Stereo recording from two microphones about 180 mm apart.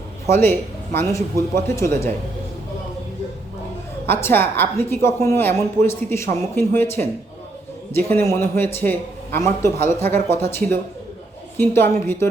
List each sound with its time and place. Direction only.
0.3 s a man's voice: 10° left (ahead or behind)
4.0 s a man's voice: 10° left (ahead or behind)